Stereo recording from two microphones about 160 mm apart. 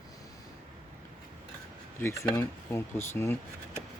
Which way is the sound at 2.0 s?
20° left (ahead or behind).